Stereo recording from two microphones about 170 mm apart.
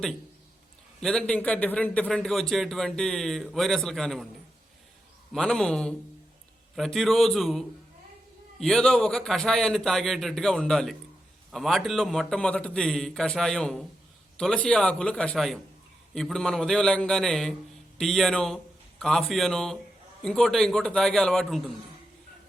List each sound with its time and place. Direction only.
1.0 s speech: 5° left (ahead or behind)
5.3 s a man's voice: 5° left (ahead or behind)